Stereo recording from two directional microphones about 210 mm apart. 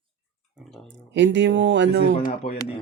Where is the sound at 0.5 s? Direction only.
Centre (ahead or behind).